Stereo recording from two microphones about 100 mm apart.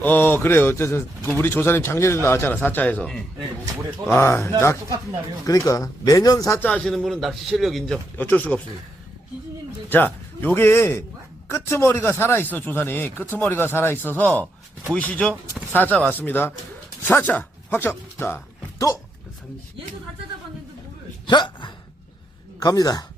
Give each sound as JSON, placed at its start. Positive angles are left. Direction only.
{"t": 0.0, "sound": "speech", "side_deg": 20}
{"t": 4.2, "sound": "speech", "side_deg": 25}
{"t": 6.6, "sound": "a man's voice", "side_deg": 10}
{"t": 8.2, "sound": "speech", "side_deg": 15}
{"t": 9.9, "sound": "a man's voice", "side_deg": 20}
{"t": 21.2, "sound": "speech", "side_deg": 50}
{"t": 22.6, "sound": "speech", "side_deg": 35}